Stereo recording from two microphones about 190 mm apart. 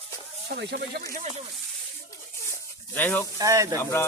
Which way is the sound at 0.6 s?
60° right (ahead or behind).